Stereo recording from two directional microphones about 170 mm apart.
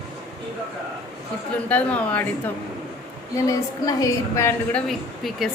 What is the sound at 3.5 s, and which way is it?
A woman's voice, 20° left (ahead or behind).